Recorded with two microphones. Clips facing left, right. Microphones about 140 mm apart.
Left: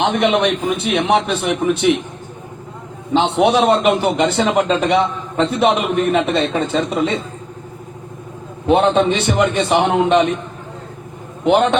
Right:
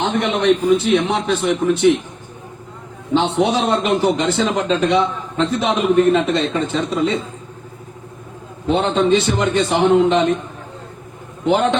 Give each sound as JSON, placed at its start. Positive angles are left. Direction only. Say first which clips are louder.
{"t": 0.0, "sound": "a man's voice", "louder": "left 2 dB", "side_deg": 70}
{"t": 3.1, "sound": "a man's voice", "louder": "left 2 dB", "side_deg": 65}
{"t": 8.6, "sound": "a man's voice", "louder": "left 3 dB", "side_deg": 70}
{"t": 11.4, "sound": "a man's voice", "louder": "left 2 dB", "side_deg": 70}